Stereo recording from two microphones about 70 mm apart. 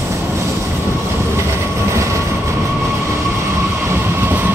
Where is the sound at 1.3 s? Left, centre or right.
Right.